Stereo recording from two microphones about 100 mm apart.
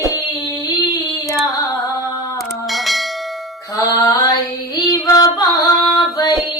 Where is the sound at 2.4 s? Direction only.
Centre (ahead or behind).